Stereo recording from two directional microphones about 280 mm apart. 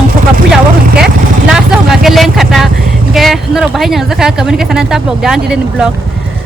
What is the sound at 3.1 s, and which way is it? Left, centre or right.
Speech, centre.